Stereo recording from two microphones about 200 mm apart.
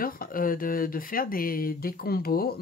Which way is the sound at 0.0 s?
45° left (ahead or behind).